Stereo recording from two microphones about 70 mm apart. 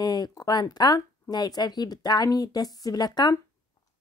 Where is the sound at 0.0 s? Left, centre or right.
Left.